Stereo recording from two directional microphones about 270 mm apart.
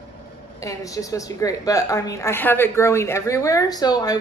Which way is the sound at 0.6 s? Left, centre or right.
Centre.